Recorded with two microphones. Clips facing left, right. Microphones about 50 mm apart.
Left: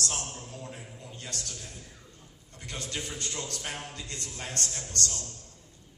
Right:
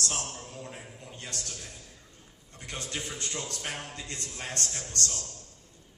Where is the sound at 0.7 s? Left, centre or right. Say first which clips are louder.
Even; right.